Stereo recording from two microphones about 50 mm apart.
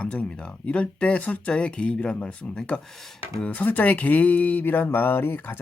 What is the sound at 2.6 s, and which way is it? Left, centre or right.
Speech, centre.